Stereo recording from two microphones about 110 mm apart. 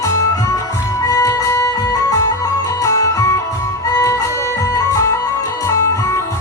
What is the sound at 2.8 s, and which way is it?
Music, 30° left (ahead or behind).